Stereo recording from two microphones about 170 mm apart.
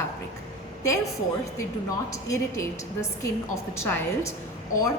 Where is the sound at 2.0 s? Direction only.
20° left (ahead or behind).